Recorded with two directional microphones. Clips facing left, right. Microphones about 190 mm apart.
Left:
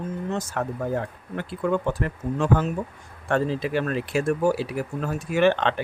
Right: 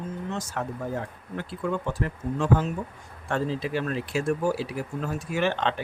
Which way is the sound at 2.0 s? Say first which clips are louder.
Left 2 dB; 60° left (ahead or behind).